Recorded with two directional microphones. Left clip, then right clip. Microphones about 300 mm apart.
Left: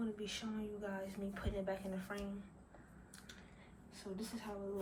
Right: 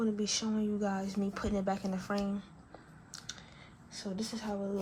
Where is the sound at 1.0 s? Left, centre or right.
Centre.